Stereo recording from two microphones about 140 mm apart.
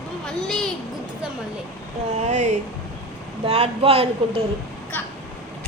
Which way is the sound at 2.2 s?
55° right (ahead or behind).